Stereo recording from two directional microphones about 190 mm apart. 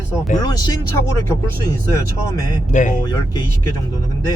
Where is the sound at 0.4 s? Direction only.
20° left (ahead or behind).